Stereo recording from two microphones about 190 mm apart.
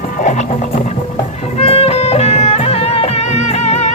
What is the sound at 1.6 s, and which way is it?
Music, 30° left (ahead or behind).